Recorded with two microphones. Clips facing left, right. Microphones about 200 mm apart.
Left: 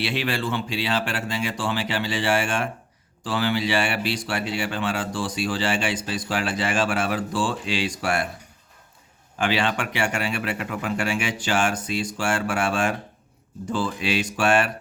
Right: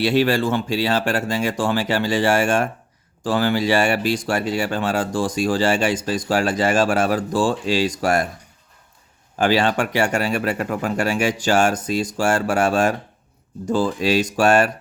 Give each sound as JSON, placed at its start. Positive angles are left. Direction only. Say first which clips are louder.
{"t": 0.0, "sound": "speech", "louder": "right 8 dB", "side_deg": -40}
{"t": 9.4, "sound": "speech", "louder": "right 6 dB", "side_deg": -40}